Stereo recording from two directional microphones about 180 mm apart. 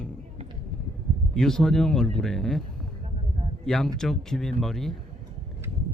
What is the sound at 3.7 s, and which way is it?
Speech, 5° left (ahead or behind).